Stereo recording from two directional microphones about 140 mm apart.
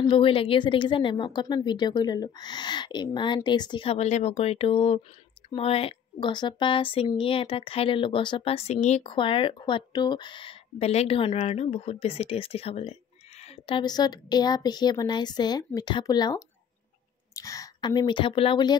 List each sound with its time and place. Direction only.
0.0 s speech: 35° left (ahead or behind)
13.4 s a sound: 45° left (ahead or behind)
13.8 s a woman's voice: 30° left (ahead or behind)